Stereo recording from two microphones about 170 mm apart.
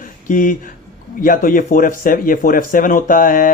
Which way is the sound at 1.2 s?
55° left (ahead or behind).